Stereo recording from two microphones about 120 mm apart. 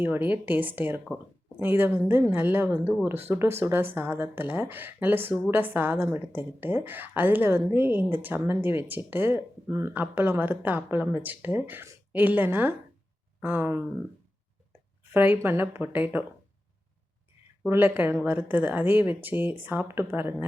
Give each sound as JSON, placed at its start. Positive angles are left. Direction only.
{"t": 0.0, "sound": "a woman's voice", "side_deg": -15}
{"t": 15.1, "sound": "a woman's voice", "side_deg": -15}
{"t": 17.7, "sound": "a woman's voice", "side_deg": -15}